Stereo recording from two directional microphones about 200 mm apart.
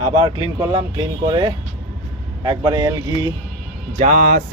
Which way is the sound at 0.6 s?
25° right (ahead or behind).